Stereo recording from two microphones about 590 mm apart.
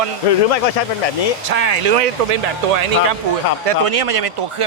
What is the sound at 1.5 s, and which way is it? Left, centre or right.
Speech, right.